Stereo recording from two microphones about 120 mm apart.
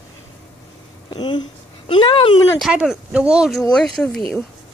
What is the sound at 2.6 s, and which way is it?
Speech, 5° right (ahead or behind).